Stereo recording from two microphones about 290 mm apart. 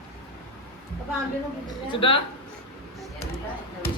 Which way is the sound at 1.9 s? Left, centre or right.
Centre.